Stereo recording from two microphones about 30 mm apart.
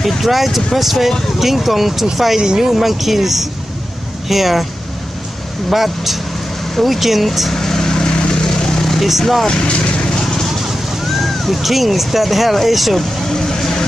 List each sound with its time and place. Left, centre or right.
0.0 s speech: centre
2.4 s speech: centre
2.7 s speech: centre
5.7 s speech: centre
7.5 s vehicle: centre; by 8.5 s left
8.6 s vehicle: centre
9.5 s vehicle: left
11.1 s speech: centre
13.3 s vehicle: centre